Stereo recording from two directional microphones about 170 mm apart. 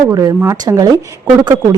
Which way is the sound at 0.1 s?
20° right (ahead or behind).